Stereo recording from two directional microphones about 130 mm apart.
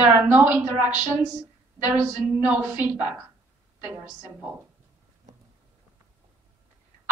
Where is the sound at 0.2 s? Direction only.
15° right (ahead or behind).